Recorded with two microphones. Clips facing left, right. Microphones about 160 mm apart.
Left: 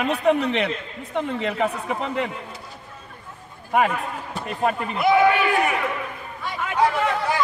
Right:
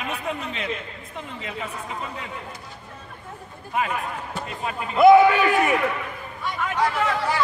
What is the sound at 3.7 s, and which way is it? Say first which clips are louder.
Speech: left 6 dB; 65° left (ahead or behind).